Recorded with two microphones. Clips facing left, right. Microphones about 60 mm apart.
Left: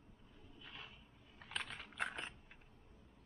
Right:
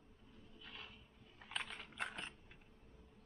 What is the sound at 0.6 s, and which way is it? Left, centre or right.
Vehicle, centre.